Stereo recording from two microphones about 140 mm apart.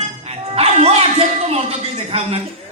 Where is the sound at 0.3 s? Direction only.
45° right (ahead or behind).